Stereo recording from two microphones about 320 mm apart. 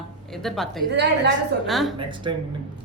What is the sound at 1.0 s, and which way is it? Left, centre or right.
Speech, right.